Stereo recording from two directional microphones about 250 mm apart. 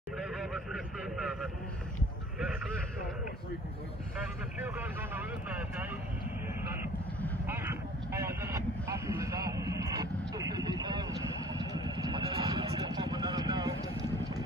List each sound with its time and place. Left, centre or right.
0.2 s vehicle: centre
4.6 s vehicle: centre
7.4 s vehicle: centre